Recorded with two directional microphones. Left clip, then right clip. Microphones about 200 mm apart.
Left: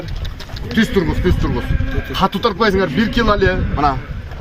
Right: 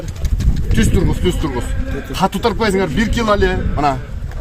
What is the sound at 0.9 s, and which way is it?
A man's voice, 35° right (ahead or behind).